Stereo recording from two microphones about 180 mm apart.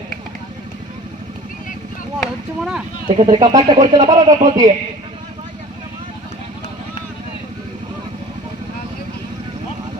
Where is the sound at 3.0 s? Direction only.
25° right (ahead or behind).